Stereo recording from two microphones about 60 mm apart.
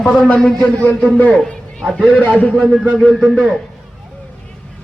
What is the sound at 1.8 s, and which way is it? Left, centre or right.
Speech, centre.